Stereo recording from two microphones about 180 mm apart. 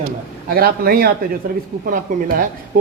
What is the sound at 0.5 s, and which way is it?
Speech, 55° right (ahead or behind).